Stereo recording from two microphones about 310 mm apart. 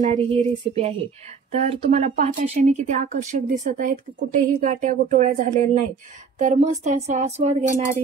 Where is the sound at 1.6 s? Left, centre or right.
Right.